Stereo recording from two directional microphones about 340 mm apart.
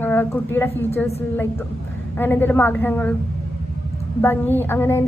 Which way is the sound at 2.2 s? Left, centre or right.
Centre.